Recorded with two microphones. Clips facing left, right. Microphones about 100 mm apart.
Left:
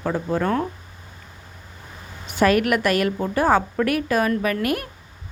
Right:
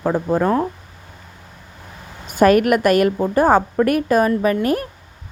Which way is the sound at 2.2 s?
45° right (ahead or behind).